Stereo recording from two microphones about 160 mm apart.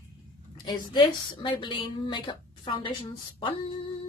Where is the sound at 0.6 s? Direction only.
30° left (ahead or behind).